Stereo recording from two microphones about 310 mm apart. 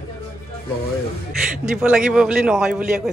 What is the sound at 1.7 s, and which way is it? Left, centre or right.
Speech, centre.